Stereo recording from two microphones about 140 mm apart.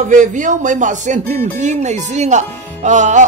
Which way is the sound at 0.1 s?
65° right (ahead or behind).